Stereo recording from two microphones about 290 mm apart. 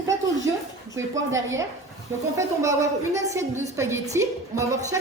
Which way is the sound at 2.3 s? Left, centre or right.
Centre.